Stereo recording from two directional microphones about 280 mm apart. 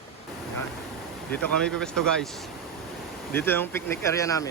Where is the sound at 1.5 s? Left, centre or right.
Centre.